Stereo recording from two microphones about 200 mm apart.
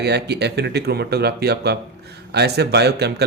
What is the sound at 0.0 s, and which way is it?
Speech, 55° right (ahead or behind).